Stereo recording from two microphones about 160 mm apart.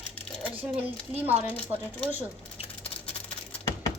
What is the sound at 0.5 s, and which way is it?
Speech, 10° right (ahead or behind).